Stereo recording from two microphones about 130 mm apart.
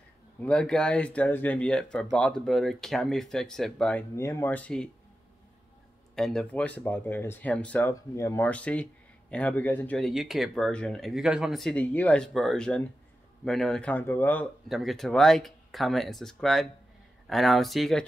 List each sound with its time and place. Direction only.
0.4 s speech: 5° left (ahead or behind)
4.1 s speech: 20° left (ahead or behind)
6.1 s speech: 5° left (ahead or behind)
7.9 s speech: 20° left (ahead or behind)
8.5 s speech: 10° left (ahead or behind)
9.9 s speech: centre (ahead or behind)
14.7 s speech: centre (ahead or behind)